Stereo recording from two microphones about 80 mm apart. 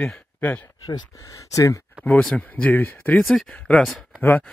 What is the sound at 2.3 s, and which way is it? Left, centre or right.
Speech, centre.